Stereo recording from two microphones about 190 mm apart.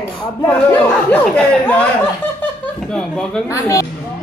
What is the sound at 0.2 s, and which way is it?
Speech, 15° left (ahead or behind).